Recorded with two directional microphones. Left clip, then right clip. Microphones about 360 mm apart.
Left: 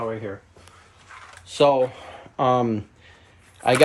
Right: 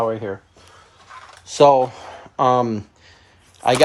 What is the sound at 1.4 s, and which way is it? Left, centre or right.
Speech, centre.